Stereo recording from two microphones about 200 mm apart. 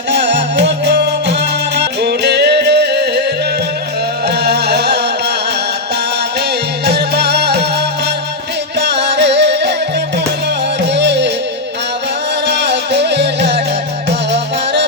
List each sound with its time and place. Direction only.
0.1 s music: 60° right (ahead or behind)
4.3 s music: 55° right (ahead or behind)
6.8 s music: 55° right (ahead or behind)
8.8 s music: 60° right (ahead or behind)
10.9 s music: 60° right (ahead or behind)
12.5 s music: 60° right (ahead or behind)